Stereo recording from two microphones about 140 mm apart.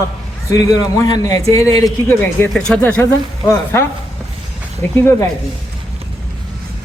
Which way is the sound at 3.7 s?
15° left (ahead or behind).